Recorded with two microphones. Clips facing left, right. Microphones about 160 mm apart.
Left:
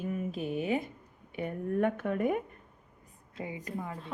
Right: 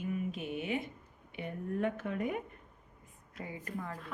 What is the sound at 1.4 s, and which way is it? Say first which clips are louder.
A woman's voice: left 5 dB; 55° left (ahead or behind).